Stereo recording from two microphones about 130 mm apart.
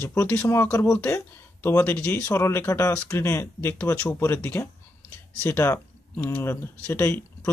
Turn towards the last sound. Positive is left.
turn(degrees=15)  # may be behind; listen again after turning